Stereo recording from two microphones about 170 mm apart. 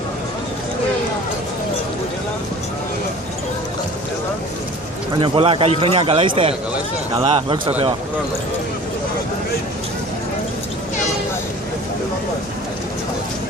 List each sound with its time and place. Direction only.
5.2 s a man's voice: 30° right (ahead or behind)